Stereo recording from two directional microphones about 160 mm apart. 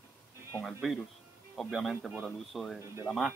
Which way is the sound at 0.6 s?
Centre (ahead or behind).